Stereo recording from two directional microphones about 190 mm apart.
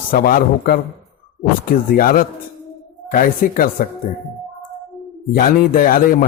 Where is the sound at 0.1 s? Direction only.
50° left (ahead or behind).